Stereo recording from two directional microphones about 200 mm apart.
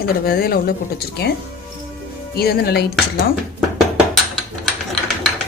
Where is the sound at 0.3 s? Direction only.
50° left (ahead or behind).